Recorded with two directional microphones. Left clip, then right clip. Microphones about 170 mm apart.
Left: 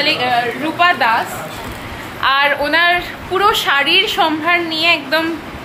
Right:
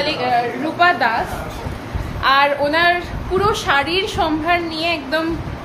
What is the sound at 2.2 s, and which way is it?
A woman's voice, 5° left (ahead or behind).